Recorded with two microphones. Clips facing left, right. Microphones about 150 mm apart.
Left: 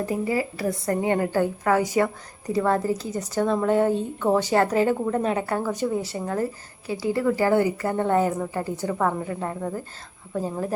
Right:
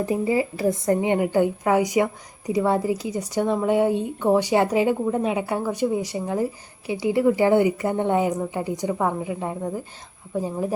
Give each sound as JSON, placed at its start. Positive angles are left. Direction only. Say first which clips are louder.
{"t": 0.0, "sound": "a woman's voice", "louder": "right 3 dB", "side_deg": -20}